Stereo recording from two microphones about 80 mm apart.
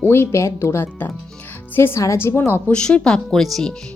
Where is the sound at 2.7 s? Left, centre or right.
Centre.